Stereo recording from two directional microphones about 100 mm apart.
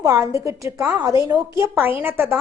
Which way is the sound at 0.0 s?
30° right (ahead or behind).